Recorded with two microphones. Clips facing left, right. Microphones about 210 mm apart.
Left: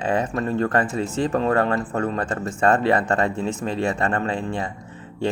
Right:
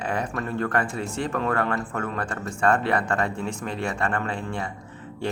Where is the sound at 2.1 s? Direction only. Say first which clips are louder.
Left 5 dB; 20° left (ahead or behind).